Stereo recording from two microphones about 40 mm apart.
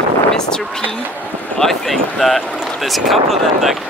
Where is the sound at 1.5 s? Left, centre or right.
Centre.